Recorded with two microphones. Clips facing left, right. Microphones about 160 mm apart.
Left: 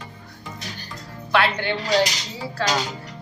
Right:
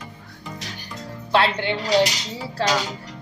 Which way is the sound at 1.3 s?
25° right (ahead or behind).